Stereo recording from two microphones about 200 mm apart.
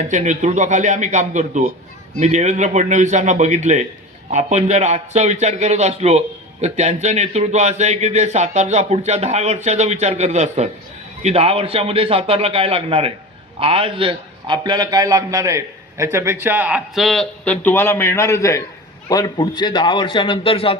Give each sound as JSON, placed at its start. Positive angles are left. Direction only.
{"t": 0.1, "sound": "a man's voice", "side_deg": -35}